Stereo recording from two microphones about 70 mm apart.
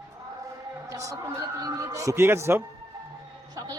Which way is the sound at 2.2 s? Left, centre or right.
Right.